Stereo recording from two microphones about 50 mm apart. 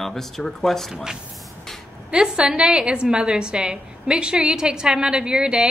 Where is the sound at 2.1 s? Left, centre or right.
Centre.